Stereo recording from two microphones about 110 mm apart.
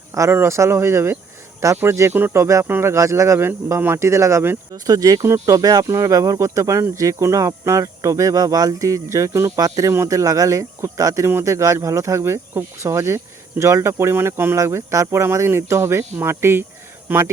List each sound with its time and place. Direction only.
0.1 s speech: 25° right (ahead or behind)